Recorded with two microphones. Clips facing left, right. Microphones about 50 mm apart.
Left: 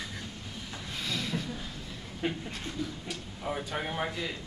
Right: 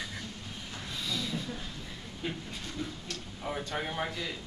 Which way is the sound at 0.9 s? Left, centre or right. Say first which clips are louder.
Left 2 dB; left.